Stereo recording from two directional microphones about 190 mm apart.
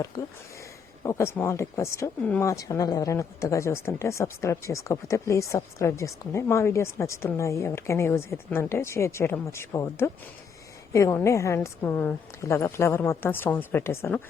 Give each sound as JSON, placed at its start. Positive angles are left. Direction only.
{"t": 0.2, "sound": "speech", "side_deg": 20}